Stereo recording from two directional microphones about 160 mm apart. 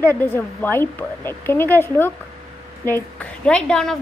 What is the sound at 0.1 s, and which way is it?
A woman's voice, 10° left (ahead or behind).